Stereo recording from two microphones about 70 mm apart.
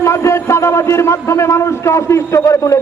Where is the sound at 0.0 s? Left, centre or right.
Left.